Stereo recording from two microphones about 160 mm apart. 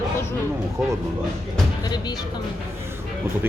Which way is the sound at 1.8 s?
25° left (ahead or behind).